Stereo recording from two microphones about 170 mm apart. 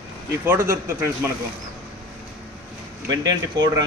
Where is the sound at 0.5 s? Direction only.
15° right (ahead or behind).